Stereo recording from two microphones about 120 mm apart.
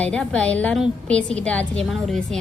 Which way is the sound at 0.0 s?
10° left (ahead or behind).